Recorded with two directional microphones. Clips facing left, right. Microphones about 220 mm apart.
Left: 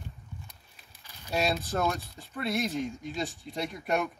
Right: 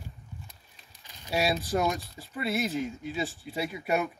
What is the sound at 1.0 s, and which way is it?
Speech, 10° right (ahead or behind).